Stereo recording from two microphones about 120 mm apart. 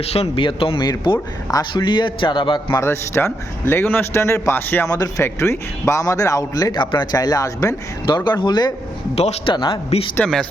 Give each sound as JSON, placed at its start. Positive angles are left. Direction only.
{"t": 0.0, "sound": "a man's voice", "side_deg": 55}
{"t": 2.7, "sound": "a man's voice", "side_deg": 20}
{"t": 4.9, "sound": "a man's voice", "side_deg": 30}
{"t": 8.0, "sound": "a man's voice", "side_deg": 40}
{"t": 9.1, "sound": "a man's voice", "side_deg": 65}
{"t": 9.5, "sound": "a man's voice", "side_deg": 40}
{"t": 10.2, "sound": "speech", "side_deg": 5}